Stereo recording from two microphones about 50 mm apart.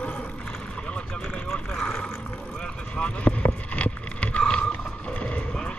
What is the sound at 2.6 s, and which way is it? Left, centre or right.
Vehicle, left.